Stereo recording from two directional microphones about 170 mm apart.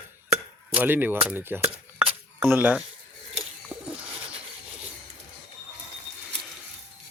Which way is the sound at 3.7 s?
5° right (ahead or behind).